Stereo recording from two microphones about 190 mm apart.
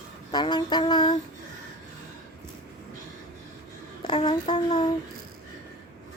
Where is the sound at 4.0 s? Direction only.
25° left (ahead or behind).